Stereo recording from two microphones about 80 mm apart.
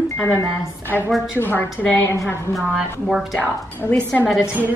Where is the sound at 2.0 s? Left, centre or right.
Left.